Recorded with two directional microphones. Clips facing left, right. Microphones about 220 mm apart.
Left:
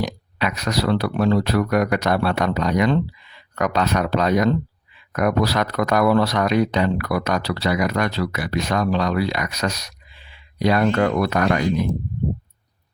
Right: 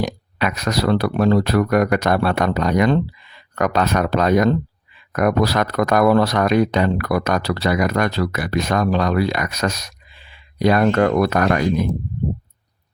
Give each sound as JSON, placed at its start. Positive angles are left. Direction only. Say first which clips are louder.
{"t": 0.0, "sound": "speech", "louder": "right 2 dB", "side_deg": -50}